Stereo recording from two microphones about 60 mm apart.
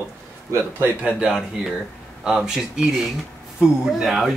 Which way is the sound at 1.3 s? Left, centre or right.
Centre.